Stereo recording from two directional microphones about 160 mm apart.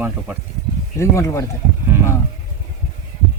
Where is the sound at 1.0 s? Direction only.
15° left (ahead or behind).